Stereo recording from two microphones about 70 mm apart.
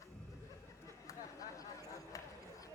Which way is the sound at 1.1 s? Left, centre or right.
Left.